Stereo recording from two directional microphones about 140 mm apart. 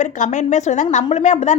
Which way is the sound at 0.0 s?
60° left (ahead or behind).